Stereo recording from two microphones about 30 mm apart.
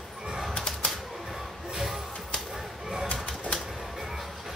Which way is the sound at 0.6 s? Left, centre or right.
Left.